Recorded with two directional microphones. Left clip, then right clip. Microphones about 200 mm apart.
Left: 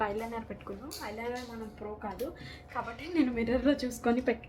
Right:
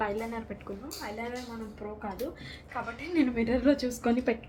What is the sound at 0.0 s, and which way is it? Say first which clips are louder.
A woman's voice: right 1 dB; centre (ahead or behind).